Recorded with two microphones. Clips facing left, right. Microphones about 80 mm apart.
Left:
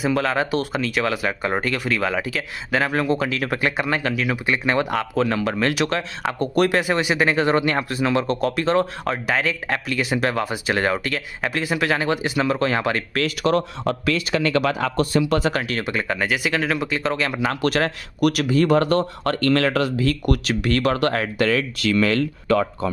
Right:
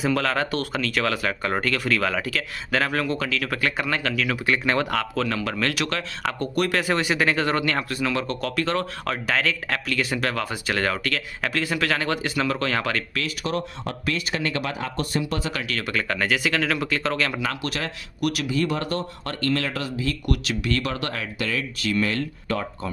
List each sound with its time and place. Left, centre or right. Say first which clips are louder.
0.0 s speech: left 2 dB; centre
13.4 s speech: left 8 dB; left
14.1 s speech: left 5 dB; left
15.6 s speech: left 3 dB; left
16.2 s speech: right 1 dB; centre
17.4 s speech: left 5 dB; left
17.6 s speech: left 9 dB; left
21.5 s speech: left 5 dB; left